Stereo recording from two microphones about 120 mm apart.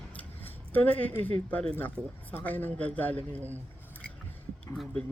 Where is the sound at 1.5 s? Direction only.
10° left (ahead or behind).